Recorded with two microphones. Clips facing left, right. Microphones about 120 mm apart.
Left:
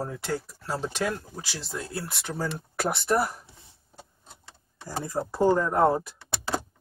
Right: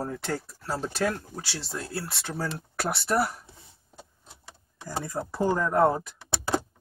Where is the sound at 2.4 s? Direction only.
Centre (ahead or behind).